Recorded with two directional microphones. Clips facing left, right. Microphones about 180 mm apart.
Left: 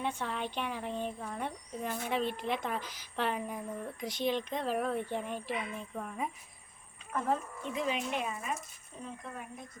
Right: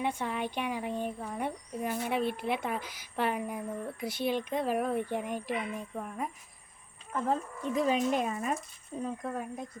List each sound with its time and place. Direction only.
0.0 s speech: 10° right (ahead or behind)
7.8 s speech: 40° right (ahead or behind)